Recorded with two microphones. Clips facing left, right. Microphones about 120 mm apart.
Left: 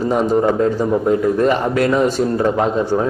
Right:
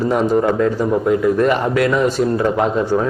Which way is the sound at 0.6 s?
30° left (ahead or behind).